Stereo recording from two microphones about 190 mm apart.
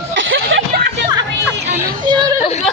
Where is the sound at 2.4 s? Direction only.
35° left (ahead or behind).